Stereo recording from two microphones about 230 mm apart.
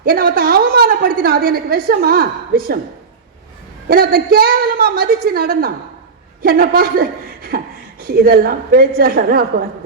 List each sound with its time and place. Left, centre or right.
0.0 s a woman's voice: right
3.8 s a woman's voice: right